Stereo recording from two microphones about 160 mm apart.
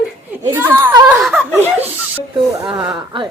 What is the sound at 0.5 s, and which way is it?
Speech, 15° right (ahead or behind).